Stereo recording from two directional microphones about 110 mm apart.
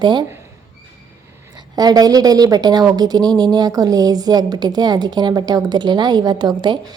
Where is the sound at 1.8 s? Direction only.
35° right (ahead or behind).